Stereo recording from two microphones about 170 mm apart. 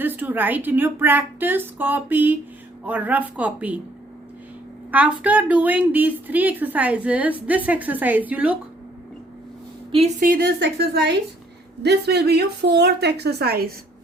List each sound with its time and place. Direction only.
0.0 s a woman's voice: 10° right (ahead or behind)
4.9 s a woman's voice: 10° right (ahead or behind)
10.2 s a woman's voice: 55° right (ahead or behind)
10.6 s a woman's voice: 80° right; by 13.7 s 65° right (ahead or behind)